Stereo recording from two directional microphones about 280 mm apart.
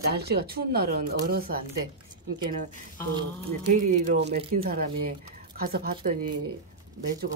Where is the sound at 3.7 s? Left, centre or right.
Right.